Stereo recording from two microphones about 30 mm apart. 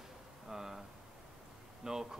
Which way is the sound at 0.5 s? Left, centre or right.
Centre.